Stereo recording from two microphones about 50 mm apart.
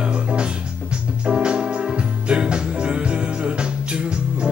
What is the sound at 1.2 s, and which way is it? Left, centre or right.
Organ, centre.